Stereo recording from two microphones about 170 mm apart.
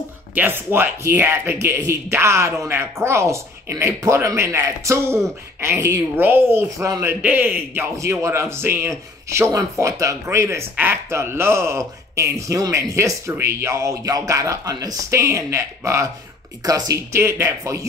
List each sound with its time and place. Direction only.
0.3 s a woman's voice: 10° right (ahead or behind)